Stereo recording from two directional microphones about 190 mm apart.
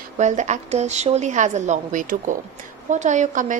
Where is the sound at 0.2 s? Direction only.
40° right (ahead or behind).